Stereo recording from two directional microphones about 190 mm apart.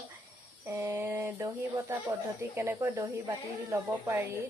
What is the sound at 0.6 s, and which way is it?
Speech, 10° right (ahead or behind).